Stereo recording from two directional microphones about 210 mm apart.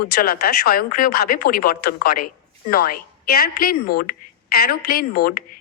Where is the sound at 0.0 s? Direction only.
45° left (ahead or behind).